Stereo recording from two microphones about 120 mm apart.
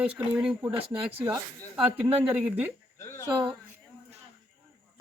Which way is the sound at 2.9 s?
20° left (ahead or behind).